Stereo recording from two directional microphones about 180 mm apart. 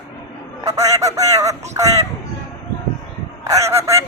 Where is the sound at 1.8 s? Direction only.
20° right (ahead or behind).